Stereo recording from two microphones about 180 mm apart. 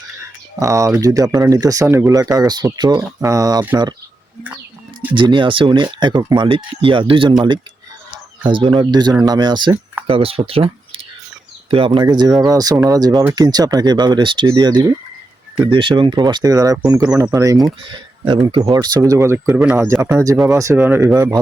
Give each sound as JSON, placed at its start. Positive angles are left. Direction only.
{"t": 0.6, "sound": "speech", "side_deg": -15}
{"t": 4.9, "sound": "speech", "side_deg": -25}
{"t": 8.4, "sound": "speech", "side_deg": -25}